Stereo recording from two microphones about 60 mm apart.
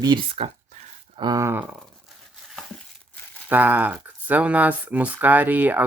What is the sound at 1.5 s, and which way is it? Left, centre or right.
Speech, right.